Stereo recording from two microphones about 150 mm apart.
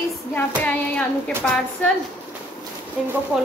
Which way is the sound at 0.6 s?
5° left (ahead or behind).